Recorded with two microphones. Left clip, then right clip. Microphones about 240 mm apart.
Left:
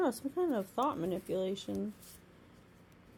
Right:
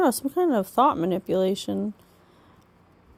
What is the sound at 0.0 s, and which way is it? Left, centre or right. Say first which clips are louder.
A woman's voice: right 11 dB; right.